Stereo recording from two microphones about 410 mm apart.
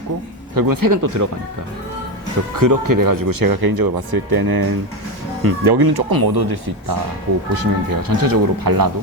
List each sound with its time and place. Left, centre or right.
0.5 s speech: right
2.6 s speech: right